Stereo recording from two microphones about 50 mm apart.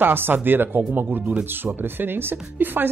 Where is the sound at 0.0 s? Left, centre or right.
Right.